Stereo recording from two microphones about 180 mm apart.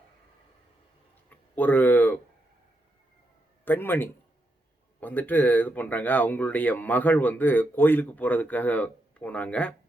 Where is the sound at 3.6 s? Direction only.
10° left (ahead or behind).